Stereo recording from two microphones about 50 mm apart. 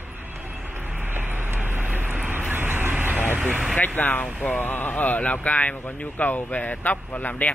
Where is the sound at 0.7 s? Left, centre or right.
Right.